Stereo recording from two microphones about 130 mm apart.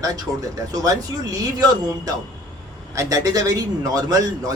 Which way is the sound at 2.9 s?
25° right (ahead or behind).